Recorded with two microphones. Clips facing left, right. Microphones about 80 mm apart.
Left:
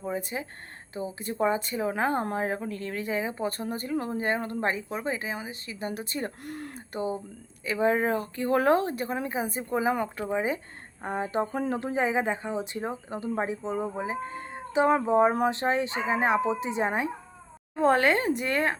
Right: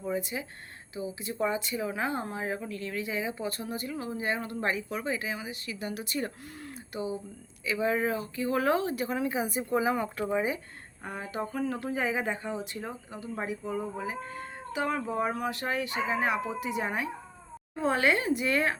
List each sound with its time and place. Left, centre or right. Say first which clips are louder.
0.2 s speech: left 1 dB; left
6.4 s speech: left 5 dB; left
10.3 s speech: left 3 dB; left
17.7 s speech: left 4 dB; left